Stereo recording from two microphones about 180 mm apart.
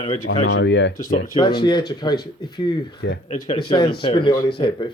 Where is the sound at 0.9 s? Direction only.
45° left (ahead or behind).